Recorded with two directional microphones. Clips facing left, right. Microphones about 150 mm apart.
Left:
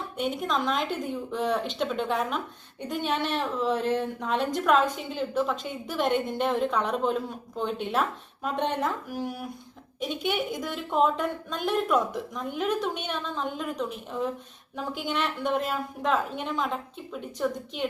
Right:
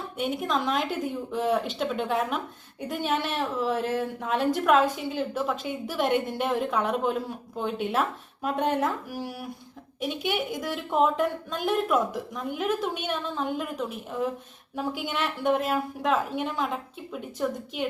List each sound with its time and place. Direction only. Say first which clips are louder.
0.2 s a woman's voice: right 1 dB; centre (ahead or behind)